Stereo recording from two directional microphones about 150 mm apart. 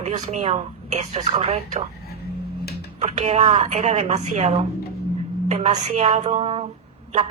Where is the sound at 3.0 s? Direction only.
45° right (ahead or behind).